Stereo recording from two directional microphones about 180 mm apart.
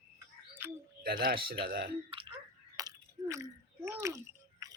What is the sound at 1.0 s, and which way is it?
Speech, 55° right (ahead or behind).